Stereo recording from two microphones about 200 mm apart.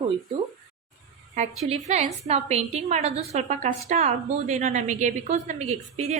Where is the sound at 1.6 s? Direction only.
35° right (ahead or behind).